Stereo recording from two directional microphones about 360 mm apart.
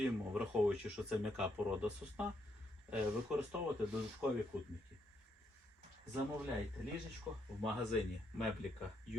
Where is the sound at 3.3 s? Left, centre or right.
Centre.